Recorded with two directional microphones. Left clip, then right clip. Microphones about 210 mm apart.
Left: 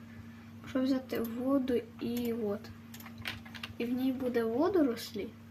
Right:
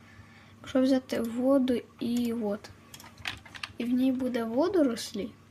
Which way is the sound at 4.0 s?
50° right (ahead or behind).